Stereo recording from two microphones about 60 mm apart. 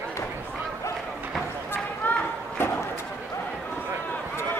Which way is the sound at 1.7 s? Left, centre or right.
Left.